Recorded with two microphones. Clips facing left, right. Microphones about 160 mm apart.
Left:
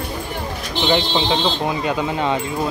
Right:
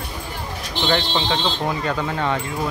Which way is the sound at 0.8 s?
15° left (ahead or behind).